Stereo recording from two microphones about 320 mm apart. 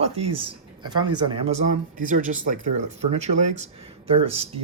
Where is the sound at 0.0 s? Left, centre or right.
Centre.